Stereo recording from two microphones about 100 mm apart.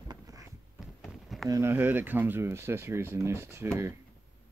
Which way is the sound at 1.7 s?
20° right (ahead or behind).